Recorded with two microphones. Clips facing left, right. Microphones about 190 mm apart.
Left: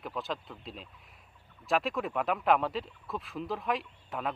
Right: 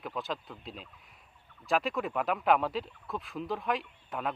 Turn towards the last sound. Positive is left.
turn(degrees=0)  # may be behind; listen again after turning